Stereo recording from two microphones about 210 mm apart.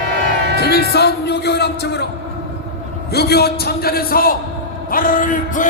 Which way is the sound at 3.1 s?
50° left (ahead or behind).